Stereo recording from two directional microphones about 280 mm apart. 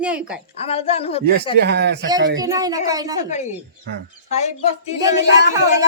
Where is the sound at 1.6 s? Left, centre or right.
Right.